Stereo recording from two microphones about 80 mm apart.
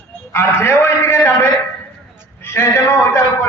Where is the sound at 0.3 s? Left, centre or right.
Left.